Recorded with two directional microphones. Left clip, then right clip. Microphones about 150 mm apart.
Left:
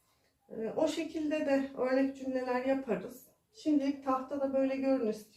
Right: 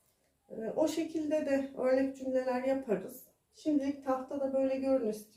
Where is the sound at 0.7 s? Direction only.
55° right (ahead or behind).